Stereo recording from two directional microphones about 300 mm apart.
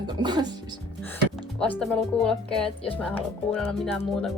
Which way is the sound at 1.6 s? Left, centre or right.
Centre.